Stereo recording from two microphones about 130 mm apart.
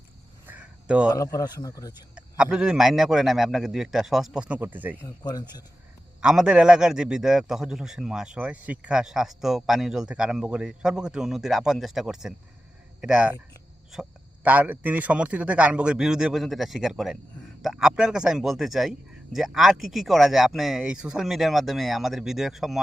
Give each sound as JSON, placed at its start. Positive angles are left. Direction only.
{"t": 0.4, "sound": "a sound", "side_deg": -10}
{"t": 1.1, "sound": "a man's voice", "side_deg": 25}
{"t": 2.1, "sound": "a man's voice", "side_deg": -5}
{"t": 5.0, "sound": "speech", "side_deg": 30}
{"t": 6.2, "sound": "a man's voice", "side_deg": -5}